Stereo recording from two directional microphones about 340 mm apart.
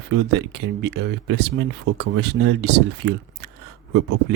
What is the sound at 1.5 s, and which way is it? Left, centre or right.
Speech, right.